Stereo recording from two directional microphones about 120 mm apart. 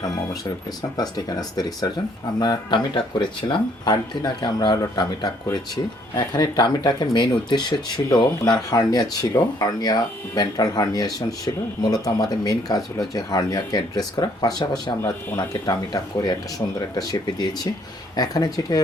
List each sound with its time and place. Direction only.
0.8 s speech: 35° left (ahead or behind)